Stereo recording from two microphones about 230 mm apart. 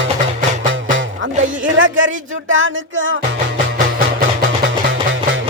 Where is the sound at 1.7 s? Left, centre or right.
Right.